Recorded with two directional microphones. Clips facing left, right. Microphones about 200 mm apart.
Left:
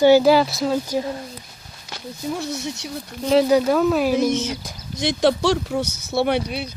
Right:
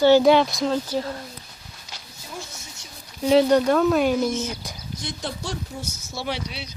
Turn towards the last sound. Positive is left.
turn(degrees=55)  # may be behind; listen again after turning